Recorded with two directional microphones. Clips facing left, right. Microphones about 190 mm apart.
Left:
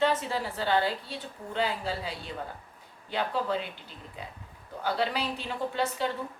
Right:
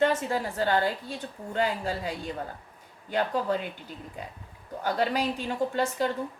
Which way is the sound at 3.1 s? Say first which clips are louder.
Right 3 dB; 45° right (ahead or behind).